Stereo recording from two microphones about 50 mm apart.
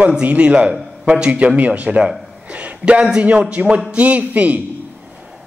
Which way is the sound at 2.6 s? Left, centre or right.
Right.